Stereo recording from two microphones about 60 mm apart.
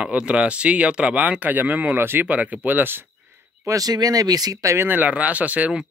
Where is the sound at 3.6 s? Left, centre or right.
Right.